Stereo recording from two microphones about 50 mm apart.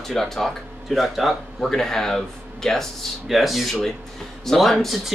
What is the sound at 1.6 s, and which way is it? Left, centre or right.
Speech, centre.